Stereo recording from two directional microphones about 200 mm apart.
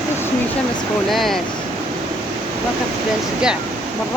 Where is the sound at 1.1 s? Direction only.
Centre (ahead or behind).